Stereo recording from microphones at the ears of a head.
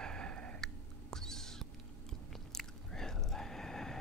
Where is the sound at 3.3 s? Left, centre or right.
Centre.